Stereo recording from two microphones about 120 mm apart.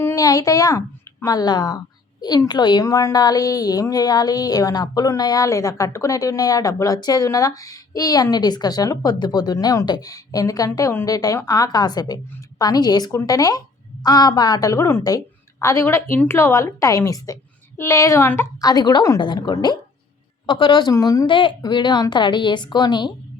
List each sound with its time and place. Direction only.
0.0 s a woman's voice: 25° left (ahead or behind)
18.6 s a woman's voice: 35° left (ahead or behind)
20.9 s a woman's voice: 30° left (ahead or behind)
21.2 s a woman's voice: 45° left (ahead or behind)